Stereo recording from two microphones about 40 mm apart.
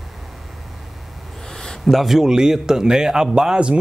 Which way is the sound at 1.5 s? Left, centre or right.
Centre.